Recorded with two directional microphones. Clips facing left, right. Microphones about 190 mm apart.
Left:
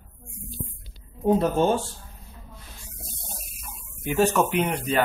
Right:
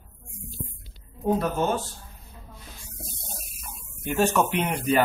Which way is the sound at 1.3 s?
25° left (ahead or behind).